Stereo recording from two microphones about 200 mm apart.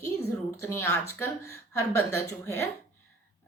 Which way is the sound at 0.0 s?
15° left (ahead or behind).